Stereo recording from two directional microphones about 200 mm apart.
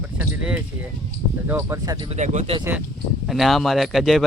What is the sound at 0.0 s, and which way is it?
Speech, 5° right (ahead or behind).